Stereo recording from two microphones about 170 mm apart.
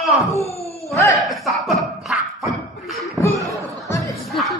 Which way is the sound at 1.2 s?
Centre (ahead or behind).